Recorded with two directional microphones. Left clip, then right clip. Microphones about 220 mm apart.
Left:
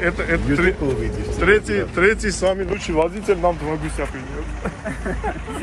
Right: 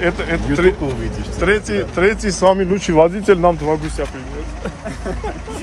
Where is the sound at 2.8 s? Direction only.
50° right (ahead or behind).